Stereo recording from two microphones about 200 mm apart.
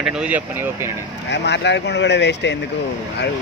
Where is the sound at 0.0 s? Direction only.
5° right (ahead or behind).